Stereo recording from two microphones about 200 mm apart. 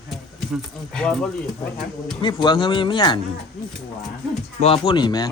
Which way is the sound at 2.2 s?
20° left (ahead or behind).